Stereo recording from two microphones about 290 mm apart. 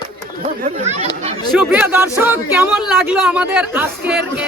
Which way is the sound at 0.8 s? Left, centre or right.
Right.